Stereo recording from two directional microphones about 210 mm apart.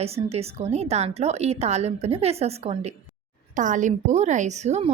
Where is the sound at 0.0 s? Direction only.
30° right (ahead or behind).